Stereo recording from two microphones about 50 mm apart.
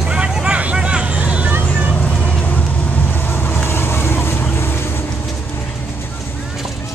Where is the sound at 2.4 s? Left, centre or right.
Left.